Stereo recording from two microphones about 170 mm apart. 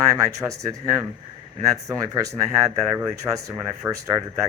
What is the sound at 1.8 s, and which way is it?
Speech, 20° right (ahead or behind).